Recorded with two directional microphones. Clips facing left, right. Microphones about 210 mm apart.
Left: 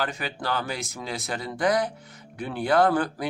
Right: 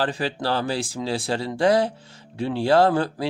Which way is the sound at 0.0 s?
30° right (ahead or behind).